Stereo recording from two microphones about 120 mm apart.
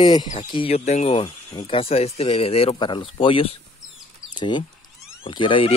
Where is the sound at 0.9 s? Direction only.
65° left (ahead or behind).